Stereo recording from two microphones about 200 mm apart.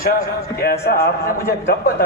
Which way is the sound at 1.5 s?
50° left (ahead or behind).